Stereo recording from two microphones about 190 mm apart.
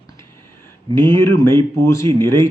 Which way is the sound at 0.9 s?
15° left (ahead or behind).